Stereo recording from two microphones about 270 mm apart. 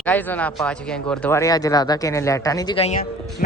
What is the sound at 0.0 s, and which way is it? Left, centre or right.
Speech, centre.